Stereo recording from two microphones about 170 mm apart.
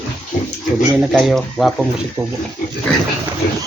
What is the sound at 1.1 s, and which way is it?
Speech, centre (ahead or behind).